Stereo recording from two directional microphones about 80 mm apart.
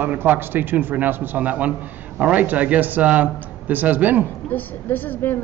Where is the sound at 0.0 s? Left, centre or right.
Right.